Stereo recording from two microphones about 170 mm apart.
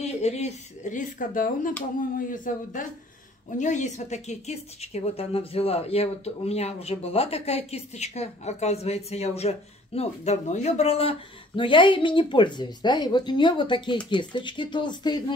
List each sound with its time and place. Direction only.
0.0 s speech: 40° left (ahead or behind)